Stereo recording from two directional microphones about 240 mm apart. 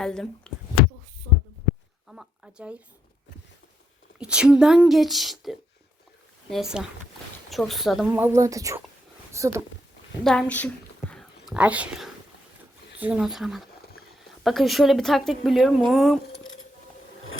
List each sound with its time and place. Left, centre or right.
0.0 s speech: centre
2.0 s speech: centre
4.2 s a woman's voice: centre
10.2 s a woman's voice: centre
11.1 s whispering: centre
13.0 s speech: centre
16.3 s keys jangling: left